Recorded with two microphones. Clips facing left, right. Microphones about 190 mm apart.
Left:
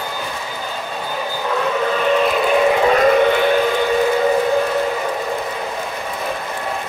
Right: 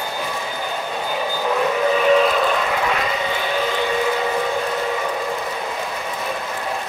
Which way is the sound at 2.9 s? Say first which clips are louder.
Left 10 dB; 55° left (ahead or behind).